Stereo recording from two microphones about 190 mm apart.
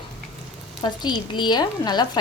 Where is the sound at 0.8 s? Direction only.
25° left (ahead or behind).